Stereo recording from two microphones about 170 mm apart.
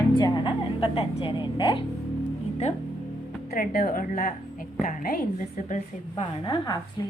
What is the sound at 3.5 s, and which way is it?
A woman's voice, 60° left (ahead or behind).